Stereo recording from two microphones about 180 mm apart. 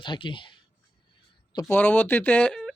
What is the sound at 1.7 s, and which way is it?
Speech, 10° left (ahead or behind).